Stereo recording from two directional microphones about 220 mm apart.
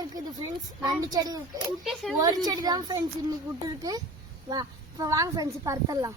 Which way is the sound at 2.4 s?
15° right (ahead or behind).